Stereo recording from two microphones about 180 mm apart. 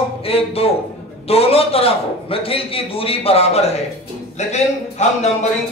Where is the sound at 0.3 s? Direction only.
30° left (ahead or behind).